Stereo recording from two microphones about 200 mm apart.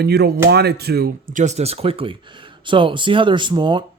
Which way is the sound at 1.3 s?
40° right (ahead or behind).